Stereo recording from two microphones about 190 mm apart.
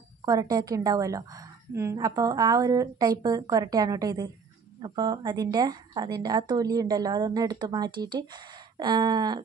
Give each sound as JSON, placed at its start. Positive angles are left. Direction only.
{"t": 0.2, "sound": "a woman's voice", "side_deg": -20}